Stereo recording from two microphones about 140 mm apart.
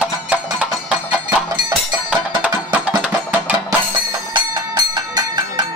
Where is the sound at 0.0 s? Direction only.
10° right (ahead or behind).